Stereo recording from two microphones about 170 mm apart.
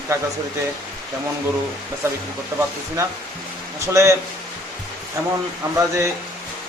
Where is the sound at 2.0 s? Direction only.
15° right (ahead or behind).